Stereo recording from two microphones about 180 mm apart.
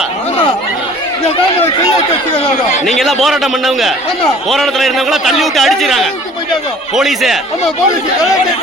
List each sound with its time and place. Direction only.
2.3 s speech: 35° left (ahead or behind)
3.0 s a man's voice: centre (ahead or behind)